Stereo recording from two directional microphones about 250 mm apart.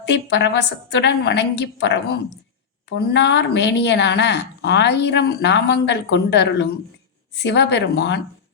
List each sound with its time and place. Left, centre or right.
0.0 s a woman's voice: left